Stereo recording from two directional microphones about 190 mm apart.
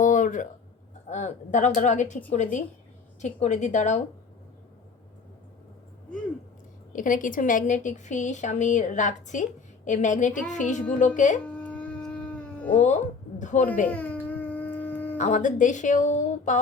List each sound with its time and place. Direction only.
0.0 s a sound: 40° left (ahead or behind)
1.1 s a woman's voice: 40° left (ahead or behind)
6.9 s a woman's voice: 45° left (ahead or behind)
11.4 s a sound: 5° left (ahead or behind)
13.4 s a woman's voice: 40° left (ahead or behind)
13.8 s dog: 10° left (ahead or behind)
15.2 s a woman's voice: 40° left (ahead or behind)